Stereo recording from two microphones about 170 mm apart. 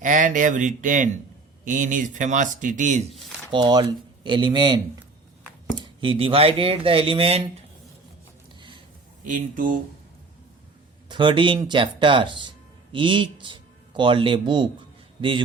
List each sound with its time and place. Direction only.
0.0 s speech: 50° right (ahead or behind)
3.5 s speech: 25° right (ahead or behind)
9.2 s speech: 50° right (ahead or behind)
11.1 s speech: 30° right (ahead or behind)